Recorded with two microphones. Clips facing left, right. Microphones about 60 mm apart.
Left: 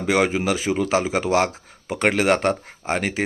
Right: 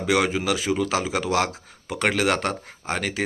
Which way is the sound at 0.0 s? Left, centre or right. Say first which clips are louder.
Left 2 dB; left.